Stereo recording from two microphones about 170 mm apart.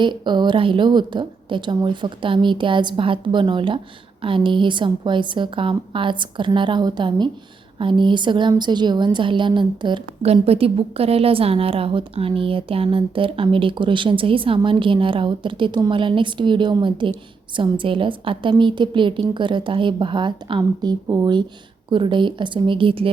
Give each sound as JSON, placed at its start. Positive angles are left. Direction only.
{"t": 0.0, "sound": "a woman's voice", "side_deg": -25}